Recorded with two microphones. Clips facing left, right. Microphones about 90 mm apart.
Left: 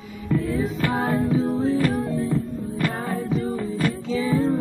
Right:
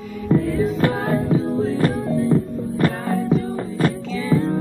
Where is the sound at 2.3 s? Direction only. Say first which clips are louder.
Right 5 dB; 40° right (ahead or behind).